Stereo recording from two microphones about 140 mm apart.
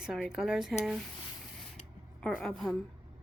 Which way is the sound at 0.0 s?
5° right (ahead or behind).